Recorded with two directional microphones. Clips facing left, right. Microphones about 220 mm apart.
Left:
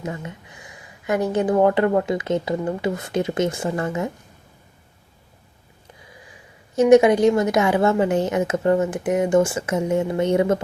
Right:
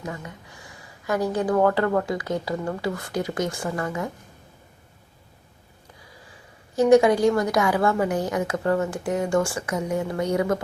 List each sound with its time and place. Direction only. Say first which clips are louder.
0.0 s speech: left 4 dB; 20° left (ahead or behind)
6.7 s speech: left 3 dB; 20° left (ahead or behind)